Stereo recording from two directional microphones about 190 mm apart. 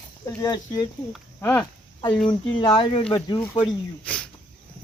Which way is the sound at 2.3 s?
25° left (ahead or behind).